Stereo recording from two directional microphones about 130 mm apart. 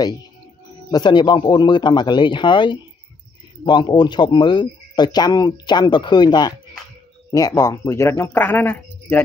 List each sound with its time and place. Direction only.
0.9 s speech: 35° left (ahead or behind); by 9.2 s 15° left (ahead or behind)